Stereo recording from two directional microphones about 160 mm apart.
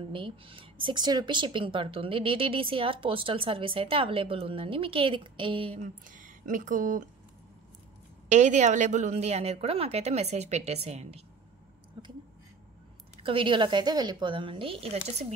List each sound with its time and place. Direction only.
0.0 s speech: 35° right (ahead or behind)
5.8 s speech: 55° right (ahead or behind)
8.3 s a woman's voice: 45° right (ahead or behind)
13.2 s speech: 35° right (ahead or behind)